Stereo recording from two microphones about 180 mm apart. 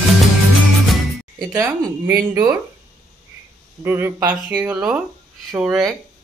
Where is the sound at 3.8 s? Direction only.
10° right (ahead or behind).